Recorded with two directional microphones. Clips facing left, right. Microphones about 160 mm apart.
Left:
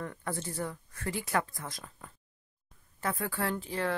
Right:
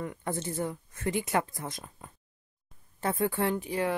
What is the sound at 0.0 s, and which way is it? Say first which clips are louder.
Speech: right 3 dB; 15° right (ahead or behind).